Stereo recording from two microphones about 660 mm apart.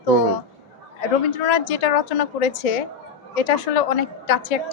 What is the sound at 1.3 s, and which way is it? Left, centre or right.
A woman's voice, left.